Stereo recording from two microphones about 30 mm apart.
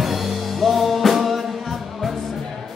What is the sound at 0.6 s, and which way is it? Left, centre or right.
Music, centre.